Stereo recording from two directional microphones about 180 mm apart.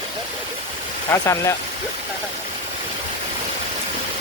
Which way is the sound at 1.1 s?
15° left (ahead or behind).